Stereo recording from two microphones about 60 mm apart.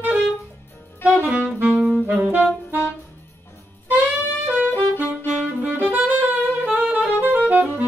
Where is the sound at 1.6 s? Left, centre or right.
Centre.